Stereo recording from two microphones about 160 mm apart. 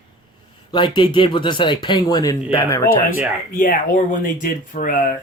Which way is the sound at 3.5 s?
60° left (ahead or behind).